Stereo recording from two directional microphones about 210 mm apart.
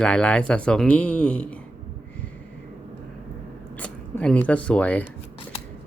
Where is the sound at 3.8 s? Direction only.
5° left (ahead or behind).